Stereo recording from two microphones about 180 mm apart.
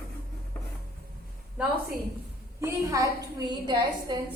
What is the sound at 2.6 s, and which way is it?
A woman's voice, 20° right (ahead or behind).